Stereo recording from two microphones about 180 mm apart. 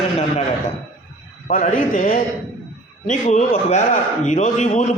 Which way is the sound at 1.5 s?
50° left (ahead or behind).